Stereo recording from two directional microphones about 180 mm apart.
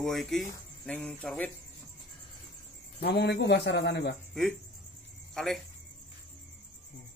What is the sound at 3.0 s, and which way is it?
A man's voice, 65° left (ahead or behind).